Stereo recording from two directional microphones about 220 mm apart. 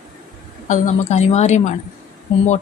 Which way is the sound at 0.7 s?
30° left (ahead or behind).